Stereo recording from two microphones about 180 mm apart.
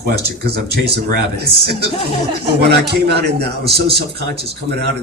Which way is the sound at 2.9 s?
65° right (ahead or behind).